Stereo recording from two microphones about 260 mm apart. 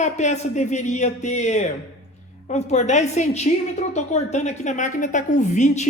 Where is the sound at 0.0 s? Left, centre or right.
Left.